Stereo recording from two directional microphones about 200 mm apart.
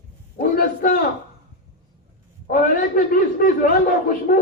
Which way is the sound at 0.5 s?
40° left (ahead or behind).